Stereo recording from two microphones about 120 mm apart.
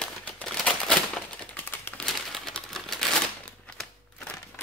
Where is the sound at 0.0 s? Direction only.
10° left (ahead or behind).